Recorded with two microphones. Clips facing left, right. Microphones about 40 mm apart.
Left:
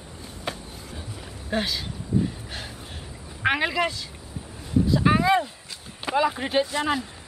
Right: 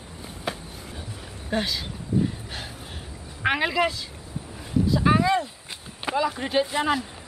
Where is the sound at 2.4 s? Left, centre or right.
Centre.